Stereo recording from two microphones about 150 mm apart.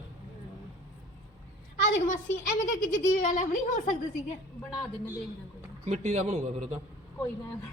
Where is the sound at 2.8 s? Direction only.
60° left (ahead or behind).